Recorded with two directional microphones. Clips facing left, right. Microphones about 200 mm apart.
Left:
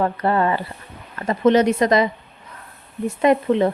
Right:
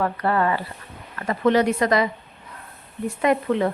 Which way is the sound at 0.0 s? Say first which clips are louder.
Left 2 dB; 25° left (ahead or behind).